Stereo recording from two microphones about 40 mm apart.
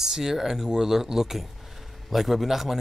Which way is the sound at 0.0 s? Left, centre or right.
Centre.